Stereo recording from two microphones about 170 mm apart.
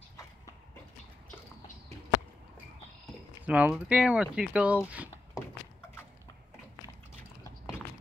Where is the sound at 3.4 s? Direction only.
5° right (ahead or behind).